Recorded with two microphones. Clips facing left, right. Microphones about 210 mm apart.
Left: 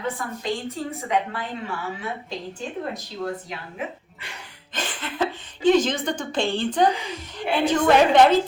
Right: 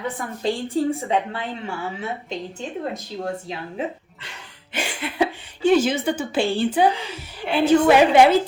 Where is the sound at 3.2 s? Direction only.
30° right (ahead or behind).